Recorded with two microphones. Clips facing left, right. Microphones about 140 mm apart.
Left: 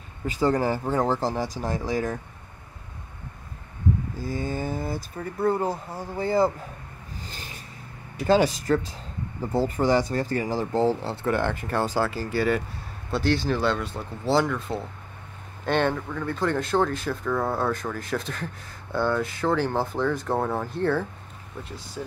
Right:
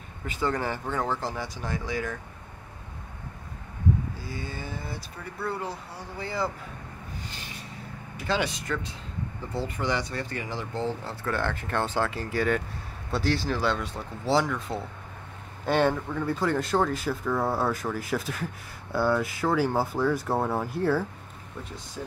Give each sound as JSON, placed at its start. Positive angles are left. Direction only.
{"t": 0.3, "sound": "speech", "side_deg": 35}
{"t": 4.2, "sound": "speech", "side_deg": 45}
{"t": 7.3, "sound": "a sound", "side_deg": 40}
{"t": 8.3, "sound": "speech", "side_deg": 40}
{"t": 11.2, "sound": "speech", "side_deg": 15}